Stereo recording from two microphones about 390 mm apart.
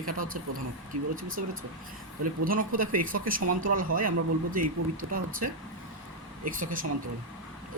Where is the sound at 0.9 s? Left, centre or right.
Right.